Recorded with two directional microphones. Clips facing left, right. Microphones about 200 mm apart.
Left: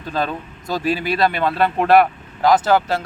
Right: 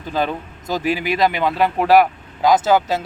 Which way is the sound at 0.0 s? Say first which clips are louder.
Right 1 dB; 15° right (ahead or behind).